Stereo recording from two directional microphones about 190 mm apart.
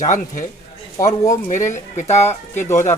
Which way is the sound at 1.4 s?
40° left (ahead or behind).